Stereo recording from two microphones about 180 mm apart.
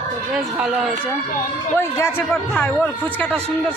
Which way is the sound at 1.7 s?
15° left (ahead or behind).